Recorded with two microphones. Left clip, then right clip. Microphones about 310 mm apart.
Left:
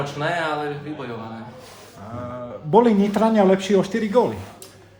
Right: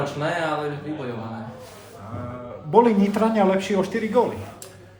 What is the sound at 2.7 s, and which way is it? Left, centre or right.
A man's voice, left.